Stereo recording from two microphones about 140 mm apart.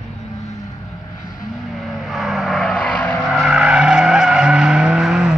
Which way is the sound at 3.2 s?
5° right (ahead or behind).